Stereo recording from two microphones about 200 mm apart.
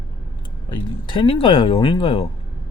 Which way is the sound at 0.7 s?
25° left (ahead or behind).